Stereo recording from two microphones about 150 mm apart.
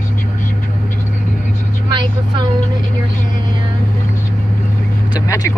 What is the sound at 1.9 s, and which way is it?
Vehicle, 30° right (ahead or behind).